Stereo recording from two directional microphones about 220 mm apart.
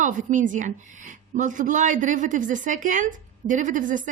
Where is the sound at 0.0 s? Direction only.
35° right (ahead or behind).